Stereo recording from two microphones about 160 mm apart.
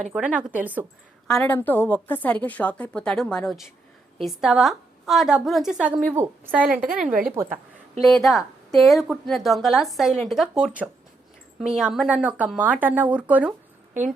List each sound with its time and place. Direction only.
0.1 s speech: 10° right (ahead or behind)
1.3 s a woman's voice: 5° left (ahead or behind)
7.1 s a woman's voice: 60° right (ahead or behind)
8.0 s a woman's voice: centre (ahead or behind)